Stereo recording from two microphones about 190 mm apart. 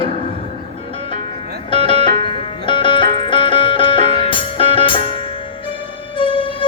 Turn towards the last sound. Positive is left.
turn(degrees=25)  # may be behind; listen again after turning